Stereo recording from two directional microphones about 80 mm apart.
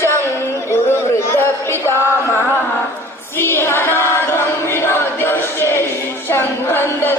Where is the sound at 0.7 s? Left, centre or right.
Left.